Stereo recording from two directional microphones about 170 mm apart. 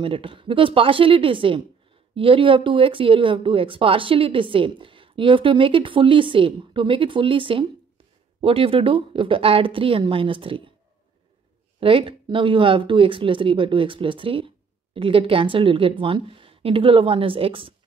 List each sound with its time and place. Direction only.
0.0 s speech: 30° right (ahead or behind)
11.8 s speech: 30° right (ahead or behind)